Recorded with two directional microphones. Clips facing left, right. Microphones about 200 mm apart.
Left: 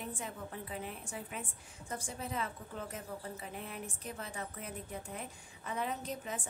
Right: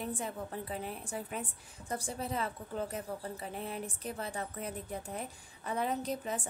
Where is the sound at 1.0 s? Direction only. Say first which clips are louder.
Right 4 dB; 40° right (ahead or behind).